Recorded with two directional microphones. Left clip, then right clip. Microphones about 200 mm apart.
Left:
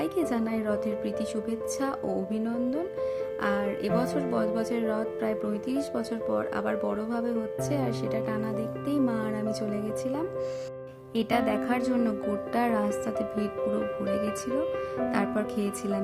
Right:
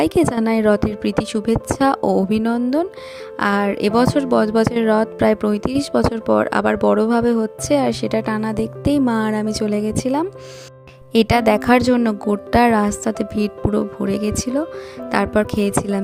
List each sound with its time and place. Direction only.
0.0 s speech: 45° right (ahead or behind)